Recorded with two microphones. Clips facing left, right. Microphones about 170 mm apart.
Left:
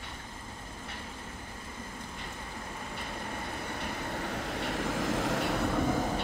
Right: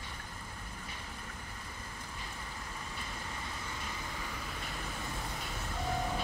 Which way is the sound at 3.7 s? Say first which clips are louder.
Left 7 dB; 60° left (ahead or behind).